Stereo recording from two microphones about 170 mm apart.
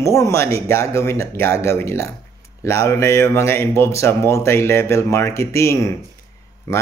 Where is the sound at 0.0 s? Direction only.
20° left (ahead or behind).